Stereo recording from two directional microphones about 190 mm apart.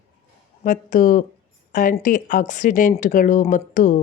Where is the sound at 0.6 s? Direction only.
45° left (ahead or behind).